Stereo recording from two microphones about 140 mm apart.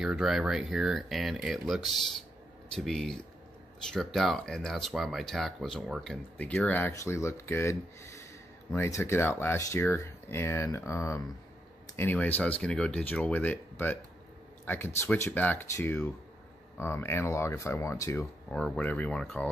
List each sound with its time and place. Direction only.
0.0 s speech: centre (ahead or behind); by 18.2 s 20° left (ahead or behind)
18.5 s speech: 10° left (ahead or behind)